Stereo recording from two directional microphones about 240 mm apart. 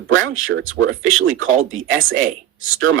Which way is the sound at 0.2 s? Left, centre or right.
Right.